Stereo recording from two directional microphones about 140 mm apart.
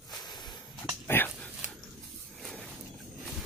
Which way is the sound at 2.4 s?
Centre (ahead or behind).